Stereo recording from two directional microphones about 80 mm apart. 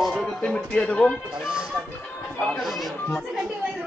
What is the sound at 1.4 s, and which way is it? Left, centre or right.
Speech, centre.